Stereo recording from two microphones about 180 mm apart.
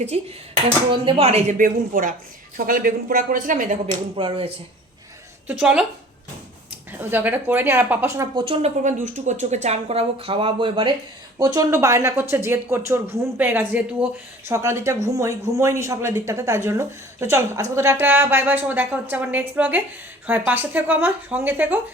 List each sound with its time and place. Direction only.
0.1 s speech: 35° right (ahead or behind)
4.2 s speech: 30° right (ahead or behind)
5.5 s a woman's voice: 5° right (ahead or behind)
7.0 s speech: 10° right (ahead or behind)
8.4 s speech: 40° right (ahead or behind); by 21.8 s 10° right (ahead or behind)